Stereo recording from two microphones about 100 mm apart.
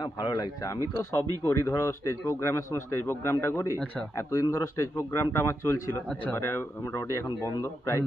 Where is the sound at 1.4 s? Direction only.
30° left (ahead or behind).